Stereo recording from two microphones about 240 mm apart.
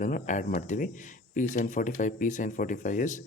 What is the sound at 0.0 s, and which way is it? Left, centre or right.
Speech, left.